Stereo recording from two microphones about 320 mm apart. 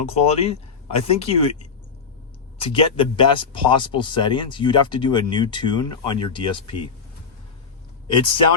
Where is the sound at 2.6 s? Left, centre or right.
Centre.